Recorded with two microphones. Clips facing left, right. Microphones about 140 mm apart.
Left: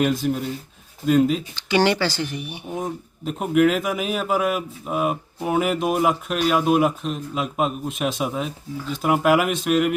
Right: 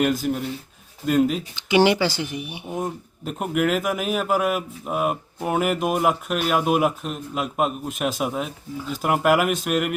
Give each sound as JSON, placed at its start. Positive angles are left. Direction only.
{"t": 0.0, "sound": "speech", "side_deg": 0}
{"t": 1.5, "sound": "speech", "side_deg": -15}
{"t": 2.7, "sound": "speech", "side_deg": 0}